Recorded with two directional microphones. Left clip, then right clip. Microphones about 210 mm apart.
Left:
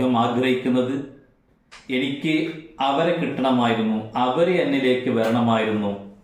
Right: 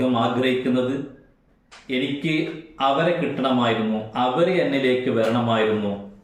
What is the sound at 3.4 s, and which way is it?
Speech, 5° right (ahead or behind).